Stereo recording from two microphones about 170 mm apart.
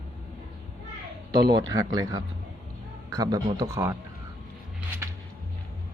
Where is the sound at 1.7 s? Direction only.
20° right (ahead or behind).